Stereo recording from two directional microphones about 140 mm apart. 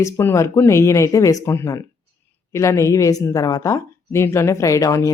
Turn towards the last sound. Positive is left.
turn(degrees=25)  # may be behind; listen again after turning